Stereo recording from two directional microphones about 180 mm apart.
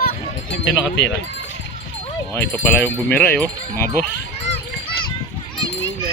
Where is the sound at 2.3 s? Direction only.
10° left (ahead or behind).